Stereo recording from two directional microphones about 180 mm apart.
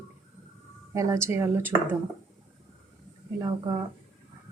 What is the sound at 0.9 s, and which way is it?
Speech, 15° right (ahead or behind).